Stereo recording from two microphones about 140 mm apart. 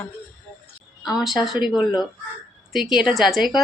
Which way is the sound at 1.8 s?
30° left (ahead or behind).